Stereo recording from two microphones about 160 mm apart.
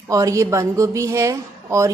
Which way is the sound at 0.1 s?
20° right (ahead or behind).